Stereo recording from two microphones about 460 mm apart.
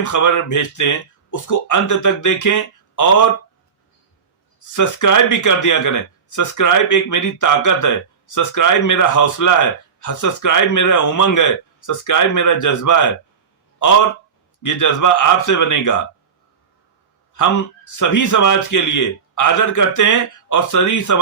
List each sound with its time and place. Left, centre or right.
0.0 s speech: left
4.7 s speech: left
14.6 s speech: left
17.3 s speech: left